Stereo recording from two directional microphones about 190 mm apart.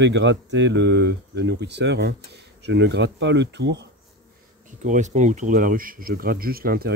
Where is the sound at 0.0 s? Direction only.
70° right (ahead or behind).